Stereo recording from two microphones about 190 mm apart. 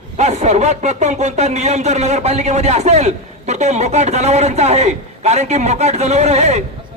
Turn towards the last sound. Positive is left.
turn(degrees=-35)  # may be behind; listen again after turning